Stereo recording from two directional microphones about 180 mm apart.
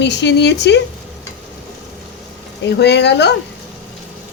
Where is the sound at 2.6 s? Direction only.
70° left (ahead or behind).